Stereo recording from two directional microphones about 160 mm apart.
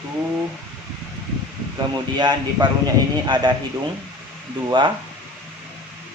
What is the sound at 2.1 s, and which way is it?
Speech, 25° right (ahead or behind).